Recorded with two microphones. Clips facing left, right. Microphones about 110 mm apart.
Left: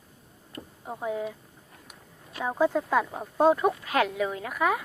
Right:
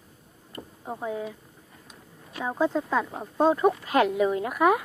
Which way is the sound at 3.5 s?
Centre (ahead or behind).